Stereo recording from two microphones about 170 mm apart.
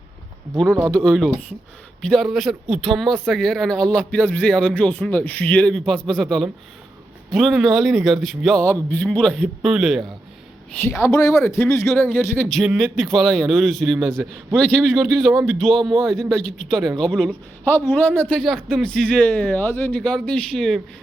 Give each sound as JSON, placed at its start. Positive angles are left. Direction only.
{"t": 0.9, "sound": "a man's voice", "side_deg": 5}
{"t": 10.7, "sound": "a man's voice", "side_deg": 10}
{"t": 15.8, "sound": "speech", "side_deg": -25}
{"t": 16.0, "sound": "a man's voice", "side_deg": 5}